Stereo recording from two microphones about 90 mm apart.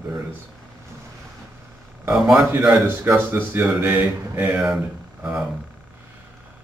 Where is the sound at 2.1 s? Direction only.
5° right (ahead or behind).